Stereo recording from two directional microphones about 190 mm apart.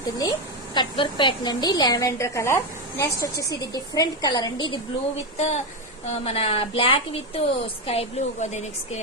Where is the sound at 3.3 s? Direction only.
60° left (ahead or behind).